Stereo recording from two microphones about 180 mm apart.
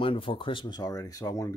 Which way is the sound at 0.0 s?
30° left (ahead or behind).